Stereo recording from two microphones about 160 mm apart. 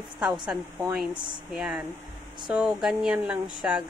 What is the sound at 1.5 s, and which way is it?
Speech, 5° right (ahead or behind).